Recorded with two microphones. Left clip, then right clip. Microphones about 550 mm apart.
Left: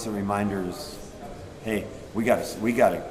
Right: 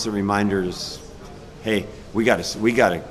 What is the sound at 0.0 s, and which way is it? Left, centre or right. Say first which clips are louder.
A man's voice: right 6 dB; right.